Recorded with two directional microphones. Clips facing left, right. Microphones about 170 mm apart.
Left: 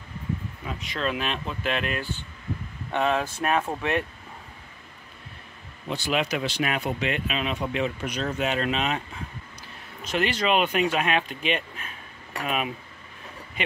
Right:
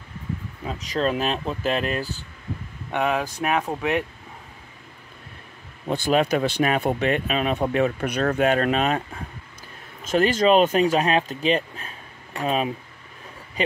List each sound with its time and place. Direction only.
0.7 s speech: 40° right (ahead or behind)
2.9 s speech: 10° right (ahead or behind)
5.9 s speech: 50° right (ahead or behind)
10.0 s speech: 45° right (ahead or behind)